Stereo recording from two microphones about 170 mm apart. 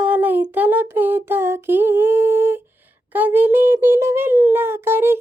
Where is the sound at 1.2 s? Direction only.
15° right (ahead or behind).